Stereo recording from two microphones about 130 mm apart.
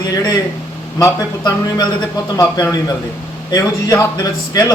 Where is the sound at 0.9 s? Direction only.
25° left (ahead or behind).